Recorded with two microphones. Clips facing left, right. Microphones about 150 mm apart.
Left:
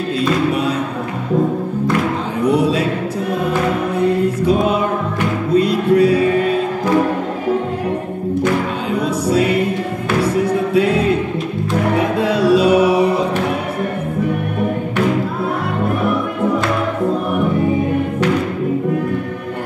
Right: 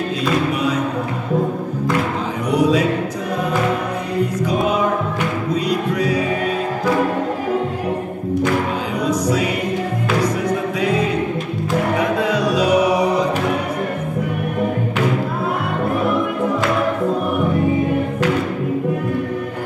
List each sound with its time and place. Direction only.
2.4 s music: 30° left (ahead or behind)
4.4 s music: 30° left (ahead or behind)
9.0 s music: 30° left (ahead or behind)
12.2 s music: 30° left (ahead or behind)